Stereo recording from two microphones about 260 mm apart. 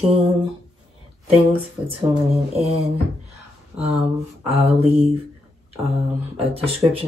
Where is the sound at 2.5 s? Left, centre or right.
Right.